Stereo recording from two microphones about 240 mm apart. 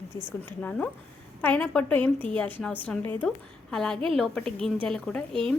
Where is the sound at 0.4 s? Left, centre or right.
Centre.